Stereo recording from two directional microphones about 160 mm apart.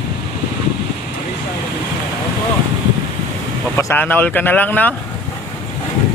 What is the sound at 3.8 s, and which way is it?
Speech, 10° left (ahead or behind).